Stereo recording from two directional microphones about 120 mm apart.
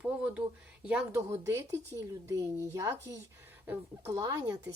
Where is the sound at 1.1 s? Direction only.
20° right (ahead or behind).